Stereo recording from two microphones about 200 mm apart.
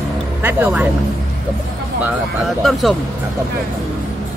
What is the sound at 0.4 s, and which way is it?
Speech, 10° right (ahead or behind).